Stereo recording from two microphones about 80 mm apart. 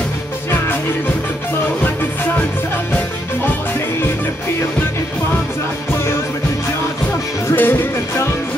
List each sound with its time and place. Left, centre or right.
7.5 s music: left